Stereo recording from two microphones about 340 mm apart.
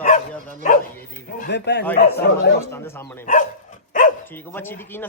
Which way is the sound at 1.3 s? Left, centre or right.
Left.